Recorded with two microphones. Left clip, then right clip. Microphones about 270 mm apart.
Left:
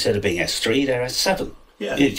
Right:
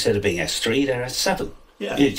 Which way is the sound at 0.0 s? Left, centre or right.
Centre.